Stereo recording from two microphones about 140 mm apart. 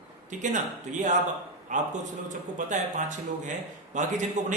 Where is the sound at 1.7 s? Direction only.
60° right (ahead or behind).